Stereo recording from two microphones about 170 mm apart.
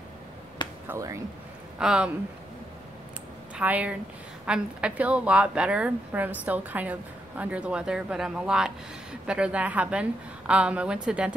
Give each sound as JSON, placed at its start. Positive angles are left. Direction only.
{"t": 0.8, "sound": "a woman's voice", "side_deg": -15}
{"t": 1.8, "sound": "speech", "side_deg": -5}
{"t": 3.5, "sound": "a woman's voice", "side_deg": -10}